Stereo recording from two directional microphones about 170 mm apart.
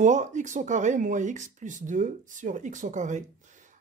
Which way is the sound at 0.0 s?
45° right (ahead or behind).